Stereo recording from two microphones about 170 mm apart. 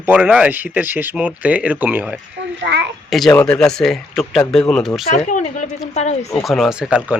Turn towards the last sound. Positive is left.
turn(degrees=-5)  # may be behind; listen again after turning